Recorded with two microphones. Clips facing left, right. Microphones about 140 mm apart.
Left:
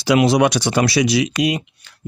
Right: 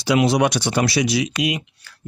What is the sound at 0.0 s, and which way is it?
Speech, 90° left.